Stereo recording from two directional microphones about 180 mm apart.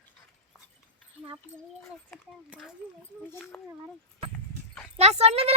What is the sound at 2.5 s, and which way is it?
Speech, 5° right (ahead or behind).